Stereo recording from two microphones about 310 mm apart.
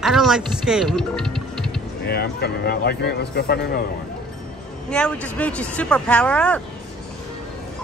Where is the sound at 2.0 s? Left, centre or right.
Left.